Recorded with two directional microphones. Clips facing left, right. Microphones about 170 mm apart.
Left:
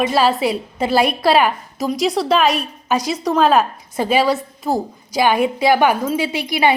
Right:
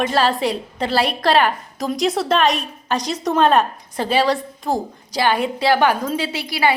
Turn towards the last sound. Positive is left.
turn(degrees=15)  # may be behind; listen again after turning